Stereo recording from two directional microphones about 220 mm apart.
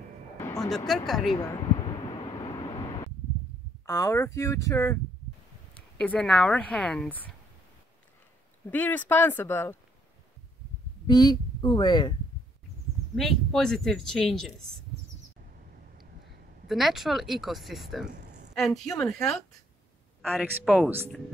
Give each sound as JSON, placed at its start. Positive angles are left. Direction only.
{"t": 0.6, "sound": "speech", "side_deg": 0}
{"t": 1.3, "sound": "a sound", "side_deg": 20}
{"t": 3.8, "sound": "speech", "side_deg": 15}
{"t": 8.6, "sound": "speech", "side_deg": 10}
{"t": 11.1, "sound": "speech", "side_deg": 20}
{"t": 13.1, "sound": "speech", "side_deg": 0}
{"t": 16.6, "sound": "speech", "side_deg": 0}